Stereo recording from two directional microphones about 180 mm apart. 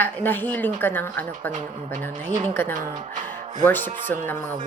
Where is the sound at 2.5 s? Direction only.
10° left (ahead or behind).